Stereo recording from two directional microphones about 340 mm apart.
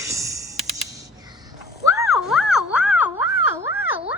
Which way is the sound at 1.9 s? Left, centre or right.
Centre.